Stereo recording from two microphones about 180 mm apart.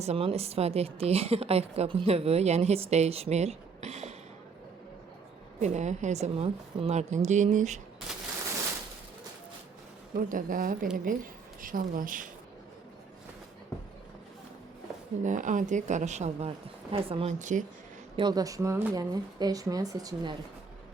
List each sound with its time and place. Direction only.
0.0 s a woman's voice: 35° right (ahead or behind)
5.5 s a woman's voice: 40° right (ahead or behind)
10.2 s speech: 50° right (ahead or behind)
15.2 s a woman's voice: 45° right (ahead or behind)
18.2 s speech: 20° right (ahead or behind)